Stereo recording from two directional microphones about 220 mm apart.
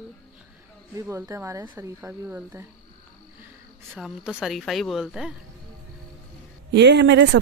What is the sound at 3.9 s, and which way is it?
Speech, 5° right (ahead or behind).